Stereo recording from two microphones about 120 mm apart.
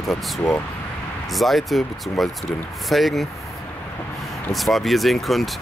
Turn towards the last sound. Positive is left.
turn(degrees=0)  # may be behind; listen again after turning